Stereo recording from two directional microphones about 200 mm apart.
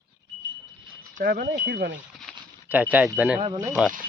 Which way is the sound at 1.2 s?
50° right (ahead or behind).